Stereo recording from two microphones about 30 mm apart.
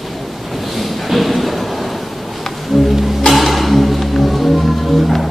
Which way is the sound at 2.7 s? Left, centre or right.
Centre.